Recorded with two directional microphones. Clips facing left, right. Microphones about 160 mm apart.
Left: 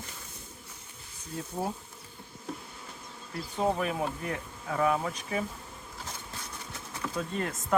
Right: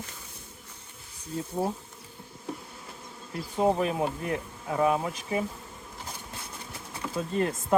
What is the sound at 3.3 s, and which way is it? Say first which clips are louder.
Speech: right 4 dB; 20° right (ahead or behind).